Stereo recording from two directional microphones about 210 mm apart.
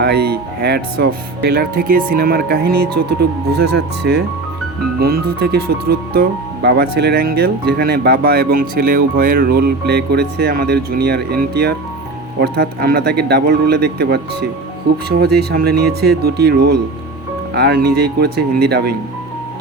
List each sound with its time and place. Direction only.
0.0 s speech: 50° right (ahead or behind)